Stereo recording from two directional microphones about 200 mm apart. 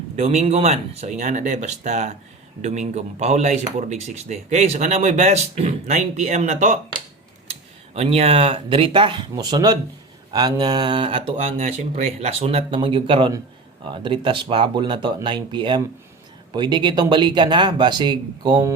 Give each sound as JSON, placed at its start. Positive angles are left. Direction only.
{"t": 0.2, "sound": "speech", "side_deg": -35}
{"t": 7.9, "sound": "speech", "side_deg": -30}